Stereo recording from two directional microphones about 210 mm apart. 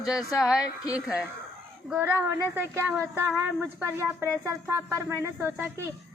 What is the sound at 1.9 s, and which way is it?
Speech, 10° right (ahead or behind).